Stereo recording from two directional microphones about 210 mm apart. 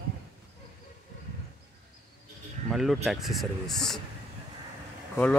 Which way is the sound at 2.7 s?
Centre (ahead or behind).